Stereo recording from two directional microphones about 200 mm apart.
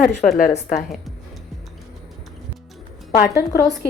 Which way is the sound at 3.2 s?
50° left (ahead or behind).